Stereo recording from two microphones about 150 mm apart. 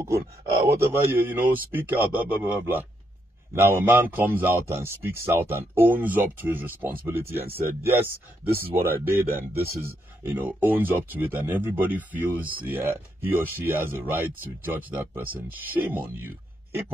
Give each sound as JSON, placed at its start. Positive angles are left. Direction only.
{"t": 0.7, "sound": "a man's voice", "side_deg": -15}
{"t": 8.7, "sound": "a man's voice", "side_deg": -15}